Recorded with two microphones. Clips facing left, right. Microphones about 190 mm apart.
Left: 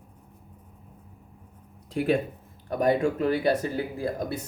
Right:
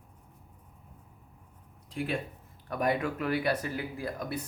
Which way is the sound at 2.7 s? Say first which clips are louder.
Left 6 dB; 30° left (ahead or behind).